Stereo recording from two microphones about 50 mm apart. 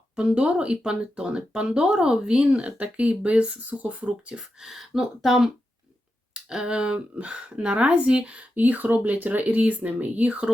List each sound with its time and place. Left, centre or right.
0.2 s speech: centre
4.4 s speech: centre; by 10.4 s right